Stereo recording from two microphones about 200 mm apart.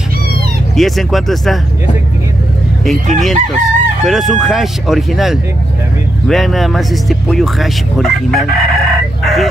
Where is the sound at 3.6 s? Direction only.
Centre (ahead or behind).